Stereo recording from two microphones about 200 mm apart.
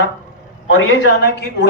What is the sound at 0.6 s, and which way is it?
Speech, 75° left (ahead or behind).